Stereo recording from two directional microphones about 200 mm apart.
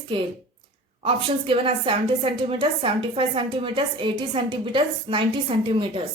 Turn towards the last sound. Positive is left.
turn(degrees=-25)  # may be behind; listen again after turning